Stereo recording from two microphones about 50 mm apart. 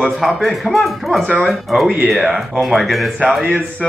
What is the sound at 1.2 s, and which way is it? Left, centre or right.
Speech, left.